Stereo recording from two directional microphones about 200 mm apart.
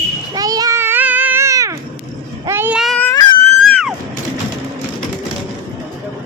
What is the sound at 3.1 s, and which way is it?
Crying, 20° left (ahead or behind).